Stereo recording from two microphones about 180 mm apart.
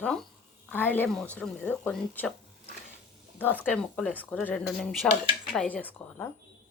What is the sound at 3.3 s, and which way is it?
Speech, 10° left (ahead or behind).